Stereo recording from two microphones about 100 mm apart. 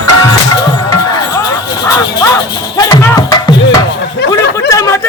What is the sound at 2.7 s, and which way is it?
Music, 40° left (ahead or behind).